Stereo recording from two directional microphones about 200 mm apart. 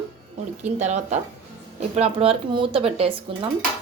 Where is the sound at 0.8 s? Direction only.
35° right (ahead or behind).